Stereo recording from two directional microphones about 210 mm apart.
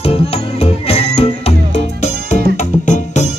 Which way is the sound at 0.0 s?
30° left (ahead or behind).